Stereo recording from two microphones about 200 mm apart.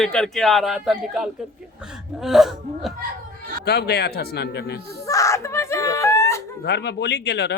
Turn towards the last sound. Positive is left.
turn(degrees=55)  # may be behind; listen again after turning